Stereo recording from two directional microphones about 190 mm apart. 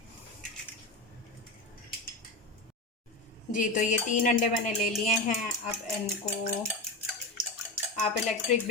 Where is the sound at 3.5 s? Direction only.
40° left (ahead or behind).